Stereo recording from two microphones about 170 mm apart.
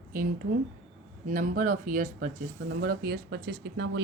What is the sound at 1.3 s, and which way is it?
Speech, 50° right (ahead or behind).